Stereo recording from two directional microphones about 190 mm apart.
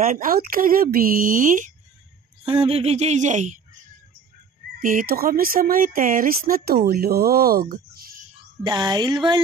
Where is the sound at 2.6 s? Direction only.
35° right (ahead or behind).